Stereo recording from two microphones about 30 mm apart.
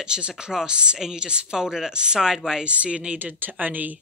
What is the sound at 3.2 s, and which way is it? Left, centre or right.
Speech, right.